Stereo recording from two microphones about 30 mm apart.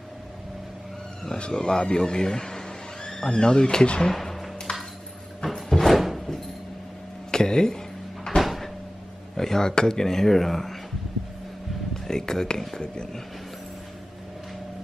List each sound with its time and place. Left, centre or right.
1.3 s speech: left
3.8 s speech: left
4.1 s a sound: centre
4.7 s ping: left
5.7 s a sound: centre
5.9 s music: centre
7.2 s a sound: left
8.4 s cupboard open or close: centre
9.4 s speech: centre
12.1 s speech: centre